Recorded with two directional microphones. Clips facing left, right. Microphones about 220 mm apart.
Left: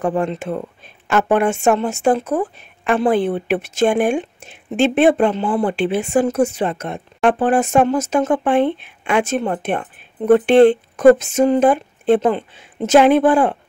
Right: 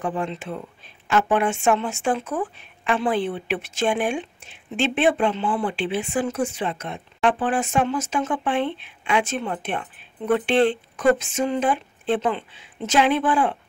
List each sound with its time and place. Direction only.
0.0 s speech: 50° left (ahead or behind)